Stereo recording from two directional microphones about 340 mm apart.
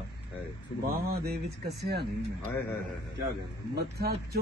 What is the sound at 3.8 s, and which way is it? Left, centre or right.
Speech, right.